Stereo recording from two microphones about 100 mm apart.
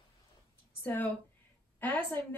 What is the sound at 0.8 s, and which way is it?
A woman's voice, 20° left (ahead or behind).